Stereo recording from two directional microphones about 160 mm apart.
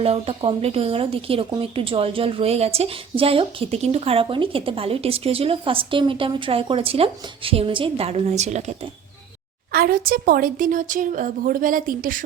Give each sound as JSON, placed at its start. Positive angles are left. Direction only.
{"t": 0.0, "sound": "a woman's voice", "side_deg": -40}
{"t": 9.7, "sound": "a woman's voice", "side_deg": -65}